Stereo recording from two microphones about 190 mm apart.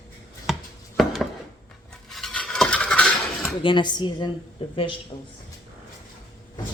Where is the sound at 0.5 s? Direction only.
Centre (ahead or behind).